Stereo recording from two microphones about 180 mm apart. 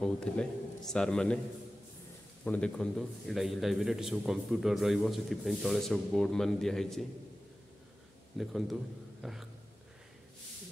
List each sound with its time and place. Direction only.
0.0 s a man's voice: 5° left (ahead or behind)
2.4 s a man's voice: 5° left (ahead or behind)
8.4 s a man's voice: centre (ahead or behind)
9.2 s a sound: centre (ahead or behind)